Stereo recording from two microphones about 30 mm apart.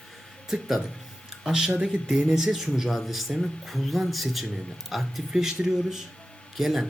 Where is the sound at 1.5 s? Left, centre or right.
Right.